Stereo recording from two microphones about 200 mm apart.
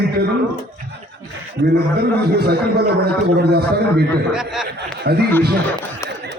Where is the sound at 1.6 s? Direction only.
65° right (ahead or behind).